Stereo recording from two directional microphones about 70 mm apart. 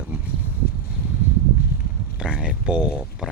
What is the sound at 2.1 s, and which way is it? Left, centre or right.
Speech, centre.